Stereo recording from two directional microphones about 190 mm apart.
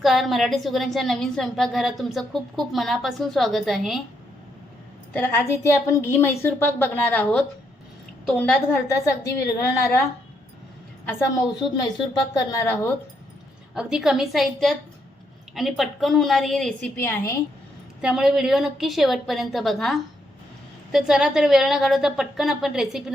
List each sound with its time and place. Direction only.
0.0 s a woman's voice: centre (ahead or behind)
5.1 s a woman's voice: 10° left (ahead or behind)
12.3 s a woman's voice: 15° left (ahead or behind)
13.7 s a woman's voice: 5° right (ahead or behind)
18.0 s a woman's voice: 5° right (ahead or behind)